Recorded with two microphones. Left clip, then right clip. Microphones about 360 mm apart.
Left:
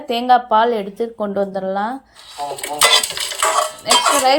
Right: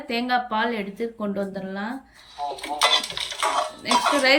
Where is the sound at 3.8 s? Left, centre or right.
Left.